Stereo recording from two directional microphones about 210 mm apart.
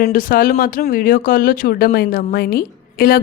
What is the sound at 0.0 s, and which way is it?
A woman's voice, 45° left (ahead or behind).